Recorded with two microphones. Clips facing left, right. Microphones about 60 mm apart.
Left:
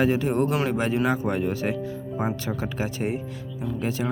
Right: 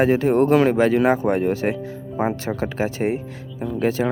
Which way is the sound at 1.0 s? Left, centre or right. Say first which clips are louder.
Right 6 dB; right.